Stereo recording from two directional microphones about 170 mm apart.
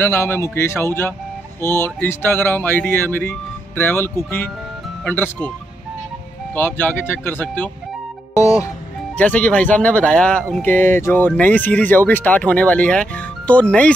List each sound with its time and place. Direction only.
0.0 s speech: 15° left (ahead or behind)
6.5 s speech: 10° left (ahead or behind)
8.4 s music: 20° left (ahead or behind)
9.1 s speech: 10° left (ahead or behind)